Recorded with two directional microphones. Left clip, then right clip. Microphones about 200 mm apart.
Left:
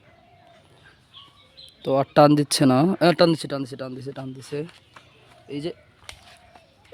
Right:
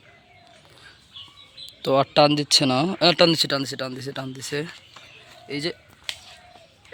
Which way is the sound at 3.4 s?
5° left (ahead or behind).